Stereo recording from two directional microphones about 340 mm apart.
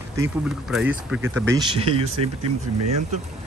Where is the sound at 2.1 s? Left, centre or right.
Right.